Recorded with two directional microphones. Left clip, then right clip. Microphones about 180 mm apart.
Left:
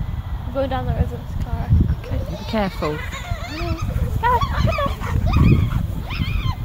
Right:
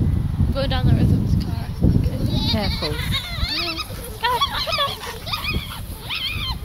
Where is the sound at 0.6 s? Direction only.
15° left (ahead or behind).